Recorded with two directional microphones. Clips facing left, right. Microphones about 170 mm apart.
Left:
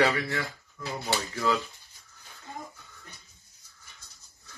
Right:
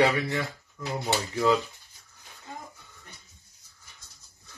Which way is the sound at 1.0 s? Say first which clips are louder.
Right 4 dB; 20° right (ahead or behind).